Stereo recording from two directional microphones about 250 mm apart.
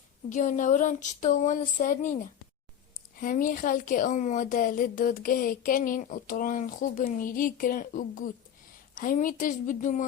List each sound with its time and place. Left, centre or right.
0.3 s a woman's voice: left